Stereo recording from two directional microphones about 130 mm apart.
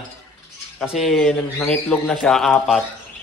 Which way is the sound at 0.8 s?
Centre (ahead or behind).